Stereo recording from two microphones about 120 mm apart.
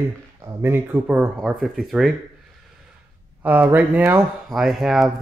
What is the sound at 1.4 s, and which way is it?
Speech, centre (ahead or behind).